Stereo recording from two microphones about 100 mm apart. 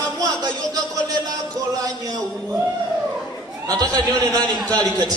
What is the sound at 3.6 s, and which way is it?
Speech, 40° right (ahead or behind).